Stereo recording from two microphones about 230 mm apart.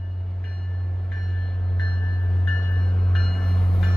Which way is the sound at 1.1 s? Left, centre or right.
Centre.